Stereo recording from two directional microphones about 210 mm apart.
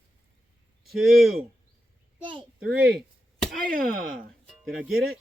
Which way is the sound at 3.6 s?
40° right (ahead or behind).